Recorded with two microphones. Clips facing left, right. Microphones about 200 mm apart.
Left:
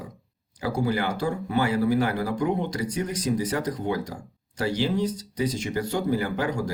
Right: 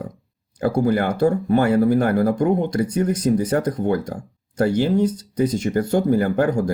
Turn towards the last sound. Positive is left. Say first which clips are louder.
# right 8 dB
turn(degrees=-50)  # may be behind; listen again after turning